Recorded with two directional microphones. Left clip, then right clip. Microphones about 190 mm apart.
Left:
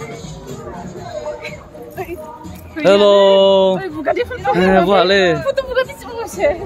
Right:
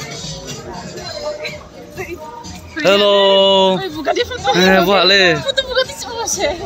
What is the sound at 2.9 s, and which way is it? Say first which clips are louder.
Speech: left 2 dB; 15° left (ahead or behind).